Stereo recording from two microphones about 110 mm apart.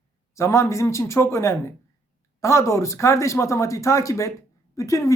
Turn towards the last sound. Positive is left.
turn(degrees=30)  # may be behind; listen again after turning